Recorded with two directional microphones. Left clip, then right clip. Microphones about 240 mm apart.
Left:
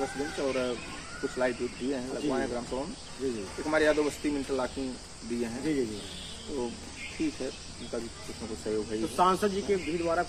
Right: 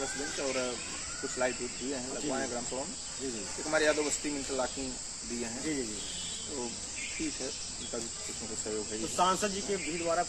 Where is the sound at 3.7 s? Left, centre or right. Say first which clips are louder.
Left 3 dB; centre.